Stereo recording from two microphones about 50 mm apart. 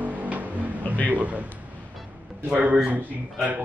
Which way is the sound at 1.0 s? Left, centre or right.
Right.